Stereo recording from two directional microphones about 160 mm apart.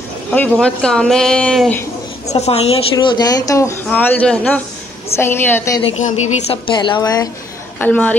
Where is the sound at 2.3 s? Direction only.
40° left (ahead or behind); by 3.7 s 20° left (ahead or behind).